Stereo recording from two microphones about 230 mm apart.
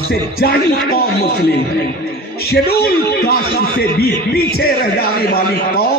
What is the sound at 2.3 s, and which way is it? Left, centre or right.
A man's voice, left.